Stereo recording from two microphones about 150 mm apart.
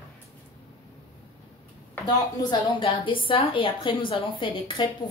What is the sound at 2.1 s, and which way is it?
A woman's voice, 30° left (ahead or behind).